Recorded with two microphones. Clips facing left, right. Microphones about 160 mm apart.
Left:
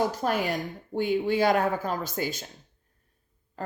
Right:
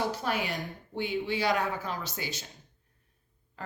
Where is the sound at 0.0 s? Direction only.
45° left (ahead or behind).